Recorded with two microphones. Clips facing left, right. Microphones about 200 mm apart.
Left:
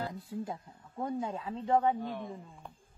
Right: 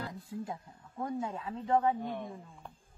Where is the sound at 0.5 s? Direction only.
20° left (ahead or behind).